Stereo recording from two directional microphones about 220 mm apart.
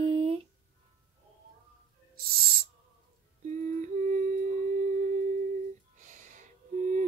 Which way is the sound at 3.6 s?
35° right (ahead or behind).